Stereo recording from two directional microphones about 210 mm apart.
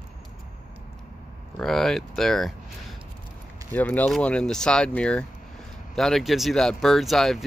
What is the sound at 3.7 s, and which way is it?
Speech, 10° left (ahead or behind).